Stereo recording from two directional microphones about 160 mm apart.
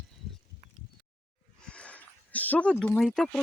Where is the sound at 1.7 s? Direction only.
10° left (ahead or behind).